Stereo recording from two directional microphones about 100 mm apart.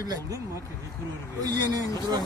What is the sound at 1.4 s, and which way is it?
Speech, 40° right (ahead or behind).